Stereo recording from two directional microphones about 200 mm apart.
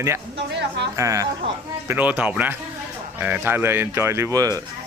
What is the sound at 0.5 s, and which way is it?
Speech, 60° right (ahead or behind).